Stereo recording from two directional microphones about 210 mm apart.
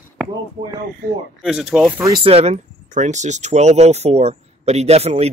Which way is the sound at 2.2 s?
30° right (ahead or behind).